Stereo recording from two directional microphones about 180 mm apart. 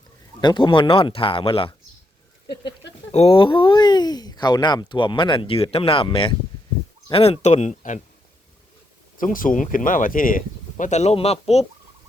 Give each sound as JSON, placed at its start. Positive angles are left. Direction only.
{"t": 0.4, "sound": "speech", "side_deg": 25}
{"t": 3.1, "sound": "speech", "side_deg": 35}
{"t": 9.1, "sound": "speech", "side_deg": 50}